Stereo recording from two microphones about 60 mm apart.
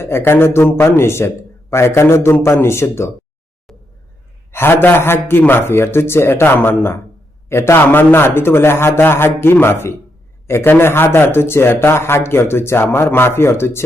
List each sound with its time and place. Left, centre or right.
0.0 s speech: left
3.7 s a sound: centre
4.5 s a man's voice: left